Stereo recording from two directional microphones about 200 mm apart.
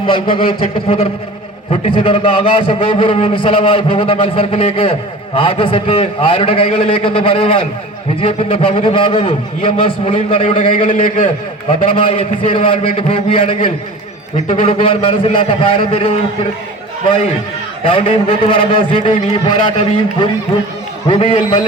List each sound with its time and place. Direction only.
0.1 s a man's voice: 25° left (ahead or behind)
11.9 s a man's voice: 25° left (ahead or behind)
17.8 s a man's voice: 30° left (ahead or behind)
21.1 s a man's voice: 30° left (ahead or behind)